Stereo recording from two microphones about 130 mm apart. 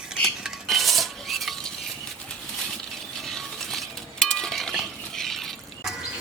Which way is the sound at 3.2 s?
Centre (ahead or behind).